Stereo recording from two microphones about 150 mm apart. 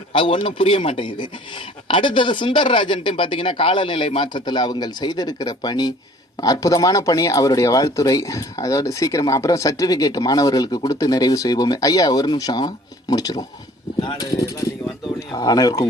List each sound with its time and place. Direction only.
0.1 s speech: 35° left (ahead or behind)